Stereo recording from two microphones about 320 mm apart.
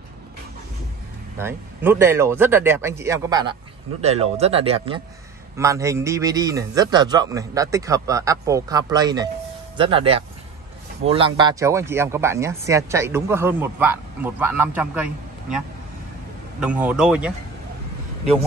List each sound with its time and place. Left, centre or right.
1.4 s speech: centre